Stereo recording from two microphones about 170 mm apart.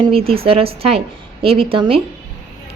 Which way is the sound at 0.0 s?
35° right (ahead or behind).